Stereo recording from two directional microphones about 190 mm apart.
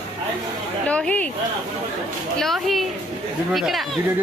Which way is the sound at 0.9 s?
5° left (ahead or behind).